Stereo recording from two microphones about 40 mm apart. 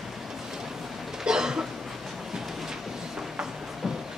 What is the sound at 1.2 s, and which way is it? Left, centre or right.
Cough, centre.